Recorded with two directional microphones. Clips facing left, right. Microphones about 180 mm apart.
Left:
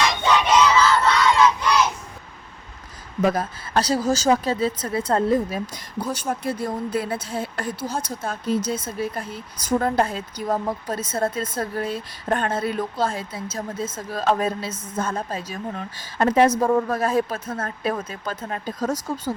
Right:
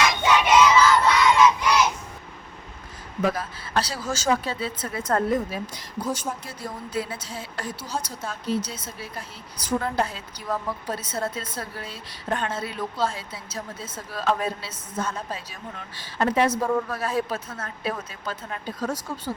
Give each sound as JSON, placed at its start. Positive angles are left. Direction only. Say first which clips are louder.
{"t": 0.2, "sound": "crowd", "louder": "left 1 dB", "side_deg": -10}
{"t": 1.0, "sound": "battle cry", "louder": "even", "side_deg": -10}
{"t": 3.2, "sound": "speech", "louder": "left 4 dB", "side_deg": 45}
{"t": 6.1, "sound": "a woman's voice", "louder": "left 8 dB", "side_deg": 55}